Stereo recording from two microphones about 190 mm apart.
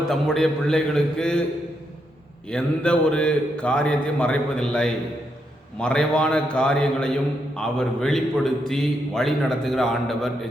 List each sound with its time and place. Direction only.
0.1 s a man's voice: centre (ahead or behind)
2.5 s a man's voice: 5° left (ahead or behind)